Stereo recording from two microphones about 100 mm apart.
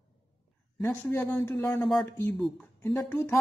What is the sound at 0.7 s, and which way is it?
A woman's voice, 20° left (ahead or behind).